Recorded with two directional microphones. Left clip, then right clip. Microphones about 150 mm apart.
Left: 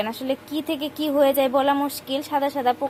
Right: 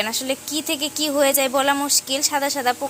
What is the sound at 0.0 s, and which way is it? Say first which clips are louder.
A woman's voice: right 2 dB; 10° left (ahead or behind).